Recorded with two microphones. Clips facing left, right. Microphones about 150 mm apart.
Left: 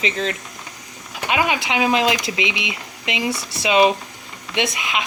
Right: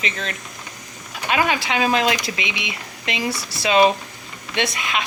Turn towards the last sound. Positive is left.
turn(degrees=20)  # may be behind; listen again after turning